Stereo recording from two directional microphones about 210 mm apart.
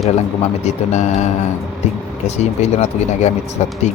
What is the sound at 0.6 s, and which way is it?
Speech, 35° left (ahead or behind).